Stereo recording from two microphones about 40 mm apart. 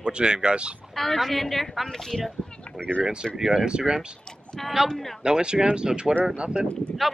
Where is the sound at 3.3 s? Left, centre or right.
Centre.